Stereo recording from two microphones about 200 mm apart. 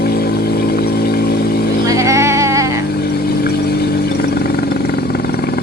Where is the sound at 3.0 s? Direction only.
50° left (ahead or behind).